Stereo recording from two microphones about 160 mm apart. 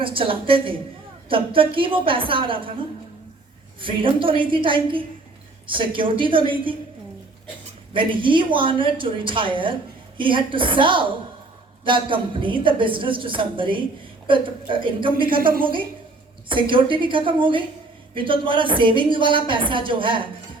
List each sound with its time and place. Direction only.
0.0 s a woman's voice: 35° right (ahead or behind)
3.8 s a woman's voice: 35° right (ahead or behind)
7.9 s a woman's voice: 30° right (ahead or behind)
15.4 s a woman's voice: 65° right (ahead or behind)
16.5 s a woman's voice: 30° right (ahead or behind)